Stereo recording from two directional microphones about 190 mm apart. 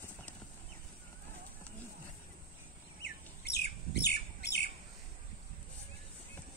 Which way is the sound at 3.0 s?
60° left (ahead or behind).